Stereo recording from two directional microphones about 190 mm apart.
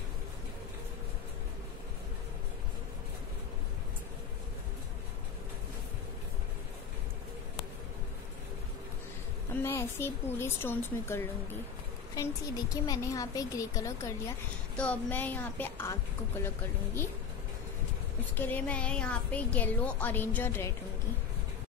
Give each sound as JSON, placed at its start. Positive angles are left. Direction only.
{"t": 9.6, "sound": "a woman's voice", "side_deg": 10}
{"t": 18.3, "sound": "a woman's voice", "side_deg": 10}